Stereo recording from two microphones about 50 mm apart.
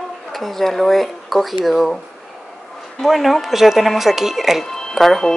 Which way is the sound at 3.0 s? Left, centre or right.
Centre.